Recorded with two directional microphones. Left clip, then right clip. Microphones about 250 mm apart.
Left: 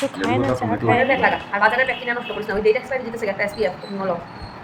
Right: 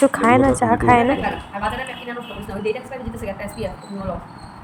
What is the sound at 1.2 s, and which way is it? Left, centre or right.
Speech, centre.